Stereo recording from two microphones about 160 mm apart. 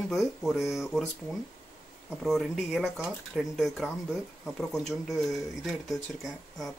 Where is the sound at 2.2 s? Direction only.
Centre (ahead or behind).